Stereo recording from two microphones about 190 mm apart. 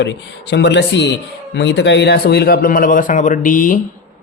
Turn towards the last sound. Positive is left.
turn(degrees=45)  # may be behind; listen again after turning